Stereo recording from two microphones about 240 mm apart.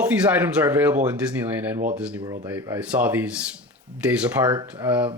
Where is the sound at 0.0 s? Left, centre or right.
Centre.